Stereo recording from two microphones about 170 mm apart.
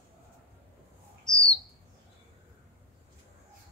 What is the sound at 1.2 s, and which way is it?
Bird, 5° left (ahead or behind).